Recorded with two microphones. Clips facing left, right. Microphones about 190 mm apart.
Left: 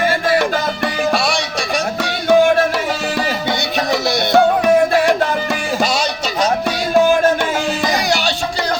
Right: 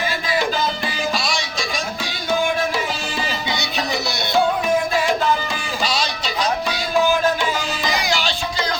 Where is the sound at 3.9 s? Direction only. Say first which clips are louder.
Left 9 dB; 60° left (ahead or behind).